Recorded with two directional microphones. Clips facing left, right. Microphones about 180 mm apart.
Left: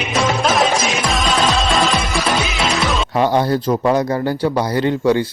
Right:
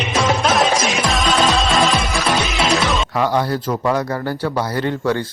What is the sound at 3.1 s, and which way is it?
Speech, 25° left (ahead or behind).